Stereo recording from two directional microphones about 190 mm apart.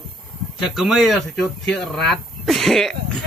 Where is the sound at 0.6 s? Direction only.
Centre (ahead or behind).